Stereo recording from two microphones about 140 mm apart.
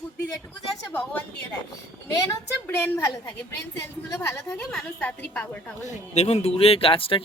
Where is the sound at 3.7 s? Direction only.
20° left (ahead or behind).